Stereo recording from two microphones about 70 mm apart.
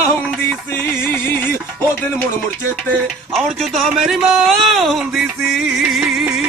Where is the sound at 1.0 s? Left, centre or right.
Left.